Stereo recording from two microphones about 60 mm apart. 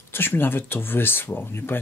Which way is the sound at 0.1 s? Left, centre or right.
Left.